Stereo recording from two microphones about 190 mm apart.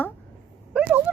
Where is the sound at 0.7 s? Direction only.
5° right (ahead or behind).